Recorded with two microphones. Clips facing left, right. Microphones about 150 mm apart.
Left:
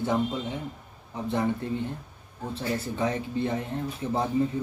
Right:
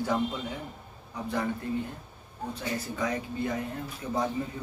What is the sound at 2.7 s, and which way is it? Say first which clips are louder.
Speech: left 3 dB; 30° left (ahead or behind).